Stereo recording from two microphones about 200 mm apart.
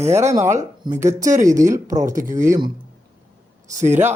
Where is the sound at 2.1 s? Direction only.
40° right (ahead or behind).